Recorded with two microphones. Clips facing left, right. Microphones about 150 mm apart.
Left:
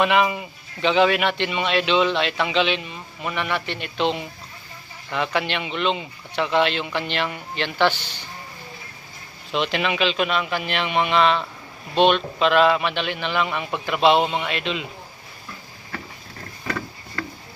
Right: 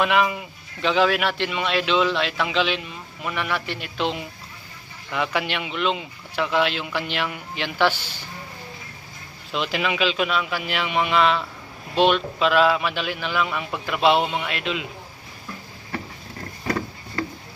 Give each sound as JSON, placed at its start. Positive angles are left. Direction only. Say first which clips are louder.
{"t": 0.0, "sound": "a man's voice", "louder": "left 1 dB", "side_deg": 0}
{"t": 9.5, "sound": "a man's voice", "louder": "left 2 dB", "side_deg": 0}
{"t": 16.6, "sound": "a sound", "louder": "right 3 dB", "side_deg": -30}